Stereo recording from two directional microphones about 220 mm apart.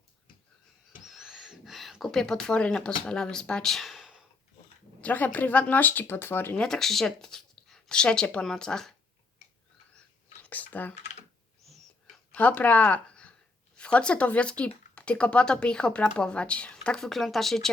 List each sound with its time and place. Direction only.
1.0 s a sound: centre (ahead or behind)
3.1 s speech: 5° left (ahead or behind)
10.4 s computer keyboard: 5° left (ahead or behind)
12.3 s speech: 5° left (ahead or behind)